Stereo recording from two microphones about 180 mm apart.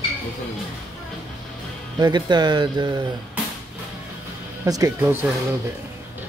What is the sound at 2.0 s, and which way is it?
Speech, 25° right (ahead or behind).